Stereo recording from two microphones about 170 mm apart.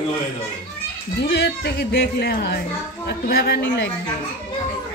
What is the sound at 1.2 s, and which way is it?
Speech, 75° left (ahead or behind).